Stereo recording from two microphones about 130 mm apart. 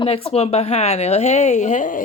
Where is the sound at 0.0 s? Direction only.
45° left (ahead or behind).